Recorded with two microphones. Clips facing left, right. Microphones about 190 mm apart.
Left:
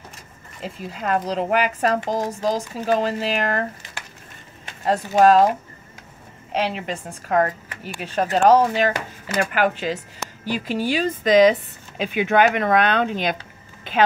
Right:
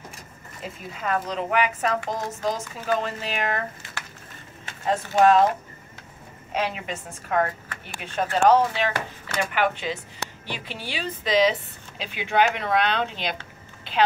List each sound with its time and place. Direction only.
0.9 s speech: 35° left (ahead or behind)
5.2 s speech: 40° left (ahead or behind)
6.5 s speech: 35° left (ahead or behind)
7.2 s speech: 45° left (ahead or behind)